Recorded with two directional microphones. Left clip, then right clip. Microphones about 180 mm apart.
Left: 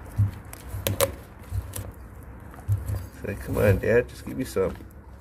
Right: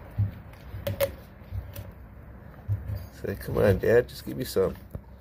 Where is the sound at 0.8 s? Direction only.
45° left (ahead or behind).